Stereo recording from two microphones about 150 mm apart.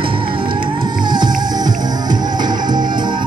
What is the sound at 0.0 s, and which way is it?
Music, 35° right (ahead or behind).